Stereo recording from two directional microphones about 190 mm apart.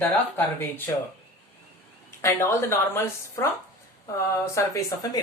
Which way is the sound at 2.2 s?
15° left (ahead or behind).